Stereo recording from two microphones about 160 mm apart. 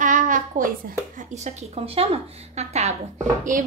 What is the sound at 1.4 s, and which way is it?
A woman's voice, 40° right (ahead or behind).